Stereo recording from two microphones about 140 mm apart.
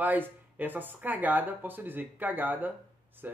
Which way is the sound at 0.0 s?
10° right (ahead or behind).